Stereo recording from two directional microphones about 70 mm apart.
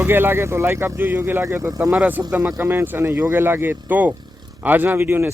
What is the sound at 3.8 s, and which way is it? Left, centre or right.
Speech, right.